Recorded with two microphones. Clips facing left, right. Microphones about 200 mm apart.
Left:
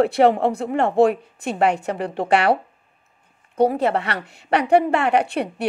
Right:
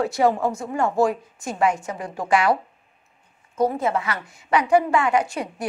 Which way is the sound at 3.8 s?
70° left (ahead or behind).